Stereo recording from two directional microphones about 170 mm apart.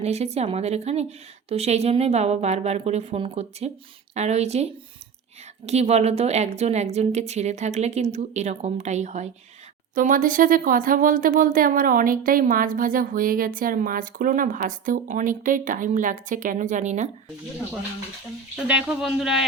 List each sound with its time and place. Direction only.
0.0 s a woman's voice: 40° right (ahead or behind)
9.9 s speech: 50° right (ahead or behind)
18.7 s speech: 5° right (ahead or behind)